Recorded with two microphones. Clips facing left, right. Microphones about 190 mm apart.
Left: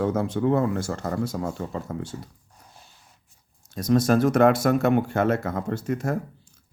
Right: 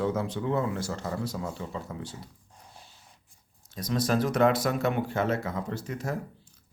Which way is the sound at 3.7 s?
50° left (ahead or behind).